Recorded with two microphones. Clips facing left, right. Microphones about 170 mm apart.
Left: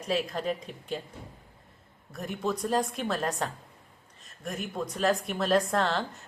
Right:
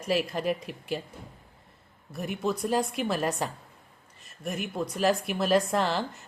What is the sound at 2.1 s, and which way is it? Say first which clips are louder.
Speech: right 2 dB; 5° right (ahead or behind).